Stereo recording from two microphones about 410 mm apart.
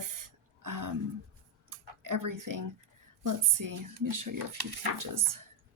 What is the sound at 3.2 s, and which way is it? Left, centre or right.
A woman's voice, right.